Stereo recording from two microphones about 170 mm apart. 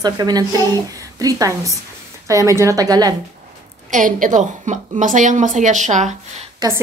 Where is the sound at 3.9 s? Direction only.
50° right (ahead or behind).